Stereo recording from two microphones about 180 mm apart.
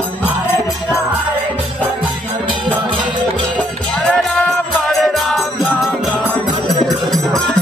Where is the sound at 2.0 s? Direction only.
25° right (ahead or behind).